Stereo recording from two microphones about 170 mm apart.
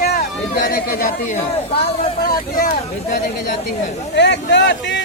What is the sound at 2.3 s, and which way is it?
Speech, 55° left (ahead or behind).